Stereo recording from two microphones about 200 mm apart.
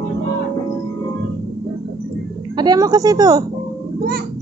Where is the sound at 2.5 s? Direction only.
20° right (ahead or behind).